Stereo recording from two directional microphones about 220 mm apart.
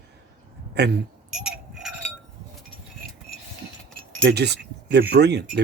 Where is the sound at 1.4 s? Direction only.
5° right (ahead or behind).